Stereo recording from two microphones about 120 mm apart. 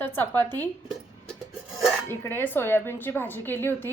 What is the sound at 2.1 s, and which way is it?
A woman's voice, 15° left (ahead or behind).